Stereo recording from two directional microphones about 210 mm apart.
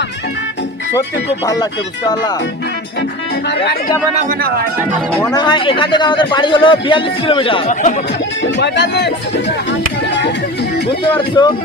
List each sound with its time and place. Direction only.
4.1 s speech: 40° right (ahead or behind)
5.2 s a man's voice: 20° left (ahead or behind); by 7.9 s 35° left (ahead or behind)
8.4 s speech: 55° left (ahead or behind)
11.0 s a man's voice: 20° left (ahead or behind)